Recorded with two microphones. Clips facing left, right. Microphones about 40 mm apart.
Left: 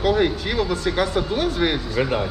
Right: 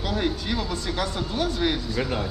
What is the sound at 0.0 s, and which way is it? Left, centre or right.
Speech, left.